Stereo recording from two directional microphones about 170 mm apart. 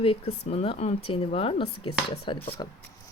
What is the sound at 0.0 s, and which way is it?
A woman's voice, 35° left (ahead or behind).